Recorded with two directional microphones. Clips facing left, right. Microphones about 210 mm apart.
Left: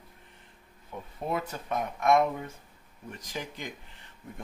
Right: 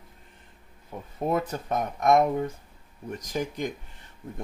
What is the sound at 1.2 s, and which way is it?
Speech, 45° right (ahead or behind).